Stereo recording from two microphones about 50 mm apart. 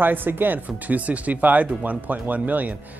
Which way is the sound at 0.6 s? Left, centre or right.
Right.